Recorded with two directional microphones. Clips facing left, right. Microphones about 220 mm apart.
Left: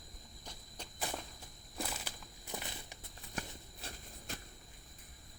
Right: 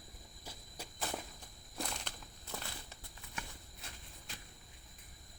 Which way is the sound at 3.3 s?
40° left (ahead or behind).